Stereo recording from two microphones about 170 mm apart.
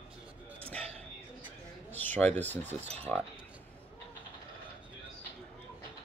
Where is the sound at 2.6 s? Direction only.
40° right (ahead or behind).